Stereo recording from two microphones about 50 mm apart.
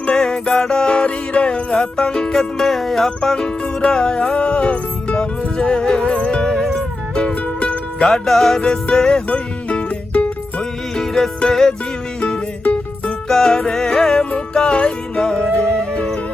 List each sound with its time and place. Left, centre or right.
0.1 s music: centre; by 8.0 s left
8.0 s music: centre
9.3 s music: left
10.9 s music: centre
12.6 s music: left
13.2 s music: centre